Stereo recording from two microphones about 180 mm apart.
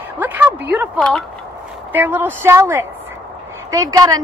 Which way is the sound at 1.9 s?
10° right (ahead or behind).